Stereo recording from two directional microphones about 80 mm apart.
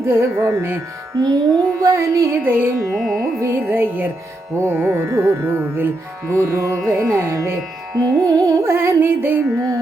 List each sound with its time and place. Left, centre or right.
0.0 s music: right
1.1 s music: right
1.8 s music: right
2.4 s music: right
2.9 s carnatic music: centre
3.4 s music: right
8.0 s music: right
9.6 s music: right